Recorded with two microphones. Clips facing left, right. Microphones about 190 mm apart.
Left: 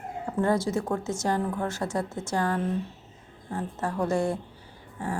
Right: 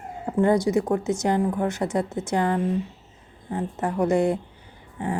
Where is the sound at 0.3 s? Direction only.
15° right (ahead or behind).